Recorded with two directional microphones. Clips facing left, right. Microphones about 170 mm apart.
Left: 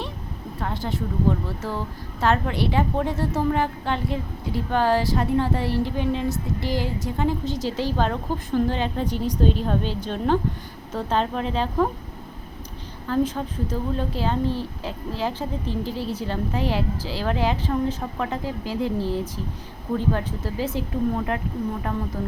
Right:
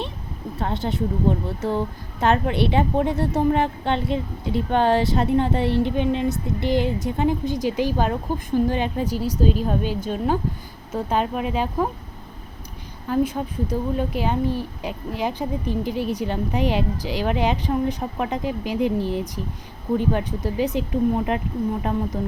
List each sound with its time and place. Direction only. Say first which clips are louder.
0.6 s a woman's voice: right 4 dB; 20° right (ahead or behind)
13.1 s speech: right 1 dB; 15° right (ahead or behind)